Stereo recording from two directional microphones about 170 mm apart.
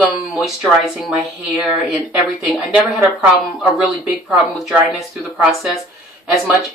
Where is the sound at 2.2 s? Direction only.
Centre (ahead or behind).